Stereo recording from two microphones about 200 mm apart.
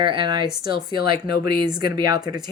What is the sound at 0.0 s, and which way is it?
Speech, 25° right (ahead or behind).